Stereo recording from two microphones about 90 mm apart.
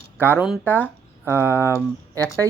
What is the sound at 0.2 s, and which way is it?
Speech, 25° right (ahead or behind).